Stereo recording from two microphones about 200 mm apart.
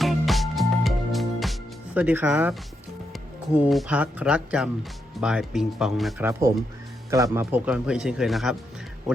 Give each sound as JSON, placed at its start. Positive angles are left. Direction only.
{"t": 0.0, "sound": "music", "side_deg": 0}
{"t": 3.1, "sound": "speech", "side_deg": -5}
{"t": 7.1, "sound": "speech", "side_deg": -15}